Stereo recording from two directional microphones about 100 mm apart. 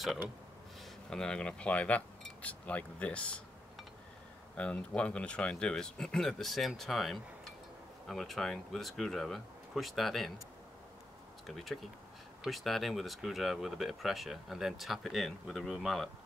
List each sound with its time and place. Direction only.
1.1 s speech: 5° left (ahead or behind)
4.6 s speech: 10° left (ahead or behind)
11.4 s speech: centre (ahead or behind)